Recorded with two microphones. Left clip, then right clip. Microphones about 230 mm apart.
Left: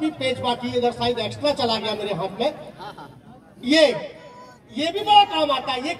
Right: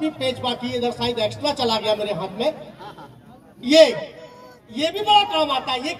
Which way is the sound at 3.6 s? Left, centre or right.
Right.